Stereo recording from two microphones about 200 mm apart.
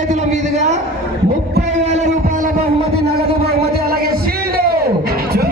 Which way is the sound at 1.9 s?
35° right (ahead or behind).